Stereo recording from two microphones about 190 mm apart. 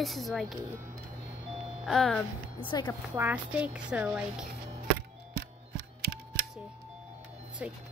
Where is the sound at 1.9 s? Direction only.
5° left (ahead or behind).